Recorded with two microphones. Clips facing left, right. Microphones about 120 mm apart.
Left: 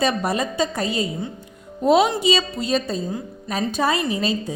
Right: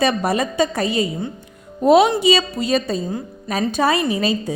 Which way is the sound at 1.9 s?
75° right (ahead or behind).